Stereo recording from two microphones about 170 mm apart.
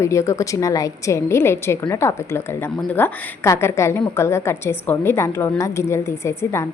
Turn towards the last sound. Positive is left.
turn(degrees=15)  # may be behind; listen again after turning